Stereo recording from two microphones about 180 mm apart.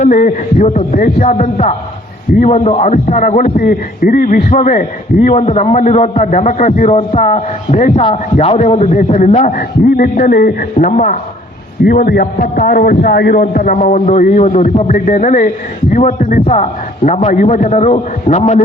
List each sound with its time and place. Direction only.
0.0 s a man's voice: 45° left (ahead or behind)